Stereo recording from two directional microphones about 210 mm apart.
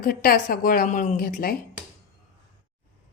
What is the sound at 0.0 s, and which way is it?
A woman's voice, 45° left (ahead or behind).